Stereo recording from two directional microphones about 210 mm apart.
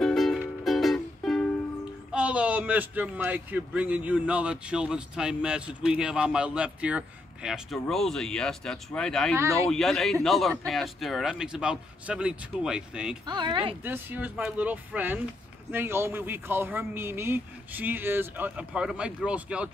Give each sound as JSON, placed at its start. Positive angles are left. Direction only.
{"t": 0.0, "sound": "music", "side_deg": 0}
{"t": 2.1, "sound": "a man's voice", "side_deg": -5}
{"t": 9.4, "sound": "speech", "side_deg": -15}
{"t": 9.7, "sound": "a man's voice", "side_deg": 0}
{"t": 13.3, "sound": "speech", "side_deg": -20}
{"t": 13.8, "sound": "speech", "side_deg": -10}